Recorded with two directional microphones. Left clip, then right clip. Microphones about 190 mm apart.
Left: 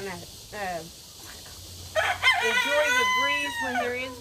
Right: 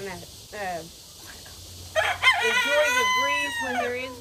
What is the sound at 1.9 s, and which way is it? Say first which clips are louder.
Speech: right 2 dB; 60° right (ahead or behind).